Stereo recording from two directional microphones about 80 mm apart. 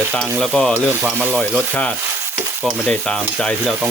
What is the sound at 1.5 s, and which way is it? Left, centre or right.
Speech, centre.